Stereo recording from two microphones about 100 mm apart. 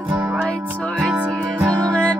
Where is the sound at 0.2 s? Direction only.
15° right (ahead or behind).